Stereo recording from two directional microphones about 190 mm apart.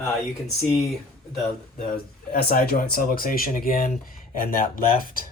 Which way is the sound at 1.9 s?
55° left (ahead or behind).